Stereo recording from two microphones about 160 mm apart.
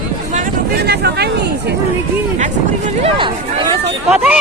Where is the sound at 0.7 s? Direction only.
90° right.